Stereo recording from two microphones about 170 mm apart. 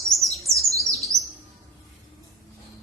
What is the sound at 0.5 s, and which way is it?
Chirp, 20° right (ahead or behind).